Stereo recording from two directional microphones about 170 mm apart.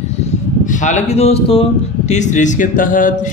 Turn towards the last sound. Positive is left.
turn(degrees=50)  # may be behind; listen again after turning